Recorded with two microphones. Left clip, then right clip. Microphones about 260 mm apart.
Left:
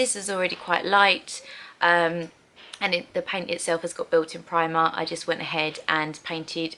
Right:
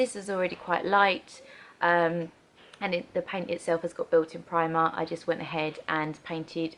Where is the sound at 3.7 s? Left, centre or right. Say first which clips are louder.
Left 2 dB; centre.